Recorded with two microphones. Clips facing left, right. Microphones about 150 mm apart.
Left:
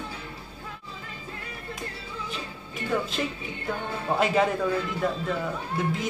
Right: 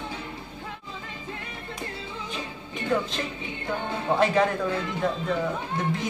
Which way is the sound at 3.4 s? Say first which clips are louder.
Right 1 dB; 25° right (ahead or behind).